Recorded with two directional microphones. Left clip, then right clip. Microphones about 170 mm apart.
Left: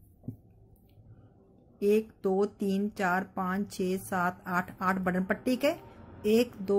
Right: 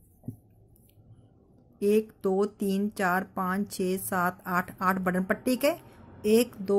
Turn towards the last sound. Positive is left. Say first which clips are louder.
# right 2 dB
turn(degrees=-20)  # may be behind; listen again after turning